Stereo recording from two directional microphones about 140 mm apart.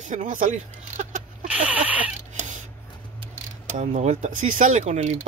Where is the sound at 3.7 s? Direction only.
55° right (ahead or behind).